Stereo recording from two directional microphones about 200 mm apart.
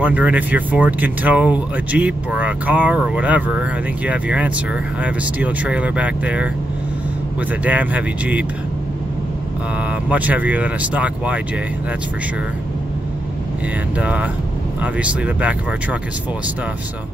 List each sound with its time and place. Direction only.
0.0 s speech: 5° right (ahead or behind)
7.6 s speech: 10° right (ahead or behind)
10.0 s speech: 5° right (ahead or behind)
13.9 s speech: 5° right (ahead or behind)